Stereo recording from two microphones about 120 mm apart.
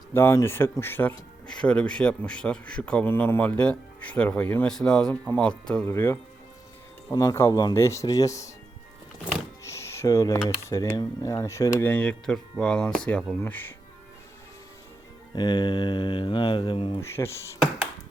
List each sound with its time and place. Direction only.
0.1 s speech: 20° left (ahead or behind)
5.9 s speech: 20° left (ahead or behind)
9.6 s speech: 25° left (ahead or behind)
15.4 s speech: 40° left (ahead or behind)
17.0 s speech: 20° left (ahead or behind)